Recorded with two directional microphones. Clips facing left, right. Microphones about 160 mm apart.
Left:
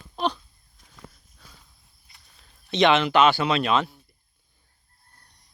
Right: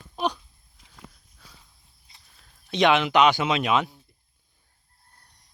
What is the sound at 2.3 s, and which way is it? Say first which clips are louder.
Speech: left 2 dB; 5° right (ahead or behind).